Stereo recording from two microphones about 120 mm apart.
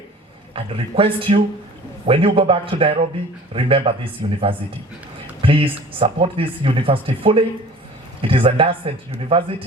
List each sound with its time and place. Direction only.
0.5 s speech: 50° right (ahead or behind)